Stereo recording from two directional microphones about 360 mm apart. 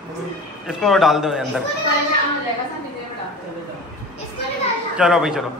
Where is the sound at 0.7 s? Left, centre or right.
Centre.